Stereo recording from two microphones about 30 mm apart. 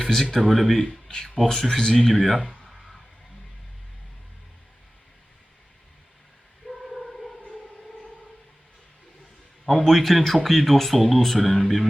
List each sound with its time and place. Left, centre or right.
0.3 s speech: centre
1.1 s speech: left
2.4 s speech: left
2.6 s a sound: centre
6.7 s choir: centre
9.6 s speech: centre